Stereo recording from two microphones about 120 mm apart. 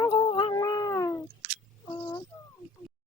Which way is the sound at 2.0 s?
30° left (ahead or behind).